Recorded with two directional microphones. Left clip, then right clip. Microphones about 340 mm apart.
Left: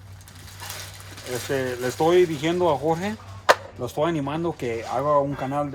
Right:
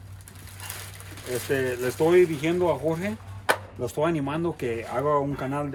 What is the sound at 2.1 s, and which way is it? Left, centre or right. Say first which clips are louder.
Speech: right 2 dB; centre.